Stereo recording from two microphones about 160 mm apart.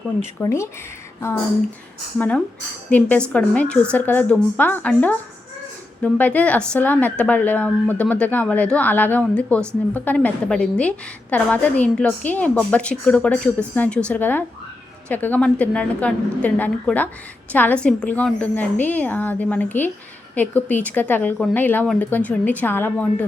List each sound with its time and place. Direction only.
0.4 s a woman's voice: 15° left (ahead or behind)
2.1 s a woman's voice: 10° left (ahead or behind)